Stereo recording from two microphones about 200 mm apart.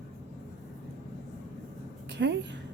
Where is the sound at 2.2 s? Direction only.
65° right (ahead or behind).